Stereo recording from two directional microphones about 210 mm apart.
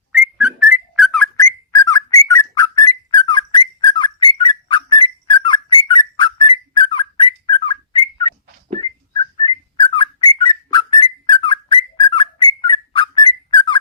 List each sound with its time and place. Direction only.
0.1 s whistling: 5° right (ahead or behind)
1.4 s whistling: 15° left (ahead or behind)
9.4 s whistling: 25° left (ahead or behind)